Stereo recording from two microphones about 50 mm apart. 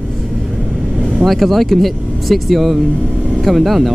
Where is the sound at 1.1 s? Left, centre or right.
Centre.